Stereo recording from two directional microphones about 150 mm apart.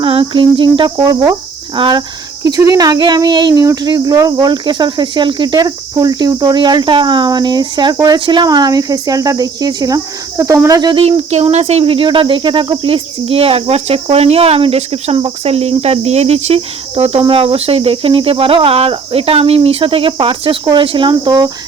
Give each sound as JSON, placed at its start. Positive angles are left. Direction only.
{"t": 0.0, "sound": "cricket", "side_deg": -35}
{"t": 1.7, "sound": "speech", "side_deg": -30}
{"t": 11.0, "sound": "speech", "side_deg": -45}
{"t": 11.5, "sound": "cricket", "side_deg": -45}